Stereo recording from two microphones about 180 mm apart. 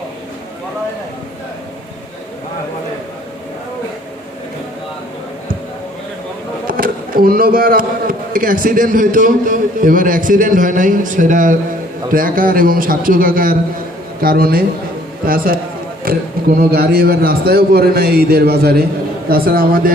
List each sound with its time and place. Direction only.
6.7 s a man's voice: 55° right (ahead or behind)
16.1 s a man's voice: 55° right (ahead or behind)